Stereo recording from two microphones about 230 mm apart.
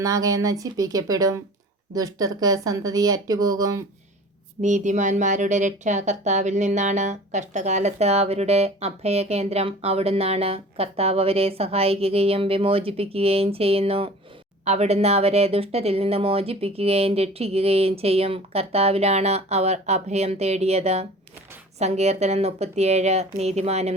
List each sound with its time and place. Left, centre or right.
0.0 s speech: centre
4.6 s speech: right